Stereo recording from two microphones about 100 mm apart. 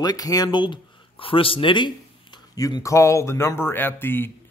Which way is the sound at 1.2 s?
65° left (ahead or behind).